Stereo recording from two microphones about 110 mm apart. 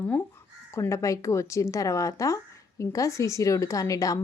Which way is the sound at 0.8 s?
25° left (ahead or behind).